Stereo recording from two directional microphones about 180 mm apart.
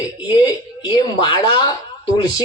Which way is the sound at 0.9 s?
25° left (ahead or behind).